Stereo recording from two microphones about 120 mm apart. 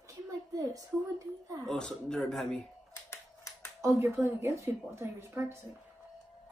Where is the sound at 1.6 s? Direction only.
5° left (ahead or behind).